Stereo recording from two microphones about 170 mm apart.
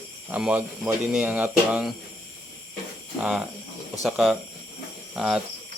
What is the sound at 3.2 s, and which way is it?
Speech, 5° right (ahead or behind).